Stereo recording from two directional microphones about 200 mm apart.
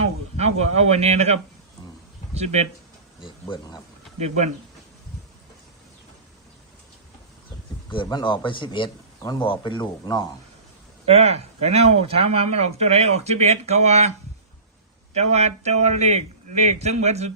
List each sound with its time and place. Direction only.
0.3 s speech: 35° right (ahead or behind)
3.2 s a man's voice: 20° left (ahead or behind)
7.9 s a man's voice: 25° left (ahead or behind)
11.2 s speech: 30° right (ahead or behind)
15.1 s speech: 35° right (ahead or behind)